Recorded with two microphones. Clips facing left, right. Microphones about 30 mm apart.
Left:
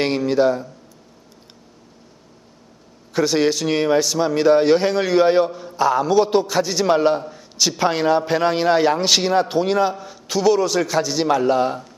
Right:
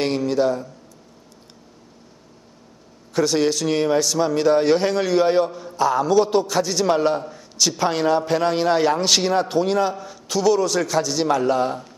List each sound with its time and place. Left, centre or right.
0.0 s a man's voice: centre
3.1 s a man's voice: centre